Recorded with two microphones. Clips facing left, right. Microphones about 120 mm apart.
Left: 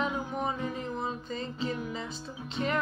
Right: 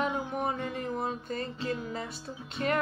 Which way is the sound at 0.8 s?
55° right (ahead or behind).